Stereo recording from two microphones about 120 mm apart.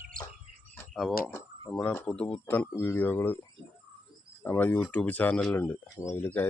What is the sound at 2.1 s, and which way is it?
Speech, 10° left (ahead or behind).